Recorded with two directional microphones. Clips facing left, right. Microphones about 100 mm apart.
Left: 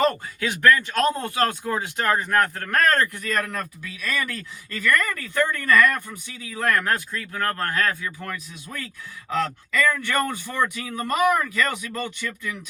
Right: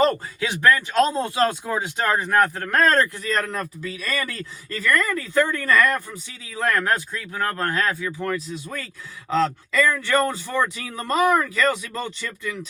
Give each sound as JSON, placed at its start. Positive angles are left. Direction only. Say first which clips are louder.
{"t": 0.3, "sound": "speech", "louder": "left 1 dB", "side_deg": -20}